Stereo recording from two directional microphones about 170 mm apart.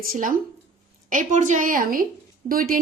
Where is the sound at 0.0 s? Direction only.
55° right (ahead or behind).